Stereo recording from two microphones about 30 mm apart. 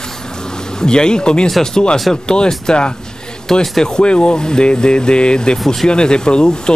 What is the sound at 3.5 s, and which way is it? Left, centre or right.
Speech, centre.